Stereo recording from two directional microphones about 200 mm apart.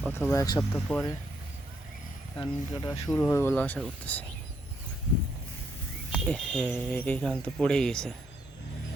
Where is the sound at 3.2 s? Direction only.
10° left (ahead or behind).